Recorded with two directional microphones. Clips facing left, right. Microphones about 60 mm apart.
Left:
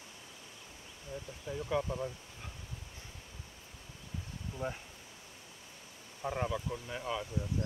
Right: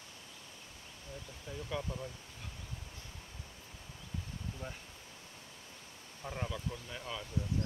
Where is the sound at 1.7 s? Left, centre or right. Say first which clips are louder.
Left 6 dB; centre.